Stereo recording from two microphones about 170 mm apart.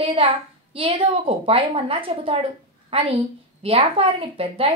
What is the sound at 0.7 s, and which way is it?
A woman's voice, 30° right (ahead or behind).